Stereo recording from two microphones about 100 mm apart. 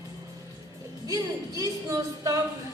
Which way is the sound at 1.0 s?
35° right (ahead or behind).